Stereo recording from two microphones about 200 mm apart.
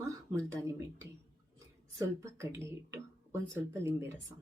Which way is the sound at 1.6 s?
15° right (ahead or behind).